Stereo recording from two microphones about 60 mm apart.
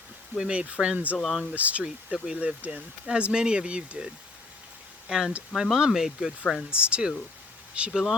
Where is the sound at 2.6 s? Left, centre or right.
Right.